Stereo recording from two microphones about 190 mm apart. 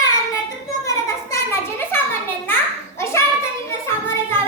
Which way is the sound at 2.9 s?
15° left (ahead or behind).